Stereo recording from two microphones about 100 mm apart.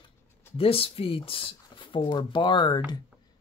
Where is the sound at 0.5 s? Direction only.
70° left (ahead or behind).